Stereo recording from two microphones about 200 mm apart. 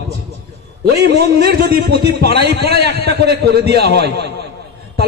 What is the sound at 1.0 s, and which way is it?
A man's voice, 55° right (ahead or behind).